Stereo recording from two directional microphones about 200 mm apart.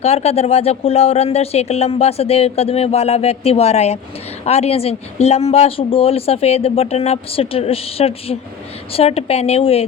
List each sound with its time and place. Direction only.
0.0 s speech: 30° left (ahead or behind)